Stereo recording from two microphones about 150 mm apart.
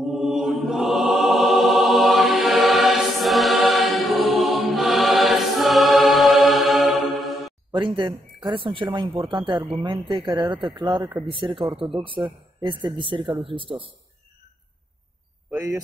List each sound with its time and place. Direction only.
0.0 s music: centre (ahead or behind)
7.7 s speech: 30° right (ahead or behind)